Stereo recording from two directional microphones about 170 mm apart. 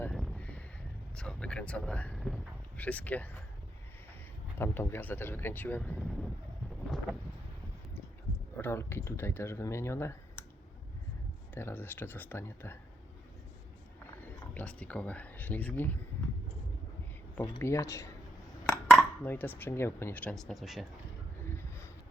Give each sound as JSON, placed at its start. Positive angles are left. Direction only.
{"t": 0.0, "sound": "a sound", "side_deg": 5}
{"t": 1.1, "sound": "speech", "side_deg": 5}
{"t": 4.5, "sound": "speech", "side_deg": 15}
{"t": 6.0, "sound": "speech", "side_deg": 0}
{"t": 8.5, "sound": "speech", "side_deg": 15}
{"t": 11.5, "sound": "speech", "side_deg": 10}
{"t": 14.3, "sound": "speech", "side_deg": 10}
{"t": 17.3, "sound": "speech", "side_deg": 15}
{"t": 18.9, "sound": "speech", "side_deg": 5}
{"t": 21.4, "sound": "a sound", "side_deg": 15}